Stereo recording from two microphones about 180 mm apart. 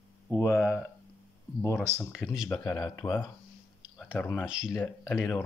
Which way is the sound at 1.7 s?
15° right (ahead or behind).